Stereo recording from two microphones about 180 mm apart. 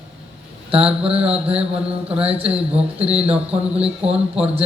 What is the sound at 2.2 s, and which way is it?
A man's voice, 35° right (ahead or behind).